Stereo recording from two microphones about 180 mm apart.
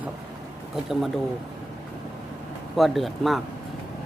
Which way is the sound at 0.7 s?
Centre (ahead or behind).